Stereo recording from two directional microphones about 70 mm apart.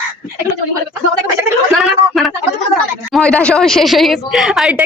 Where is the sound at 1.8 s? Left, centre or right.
Centre.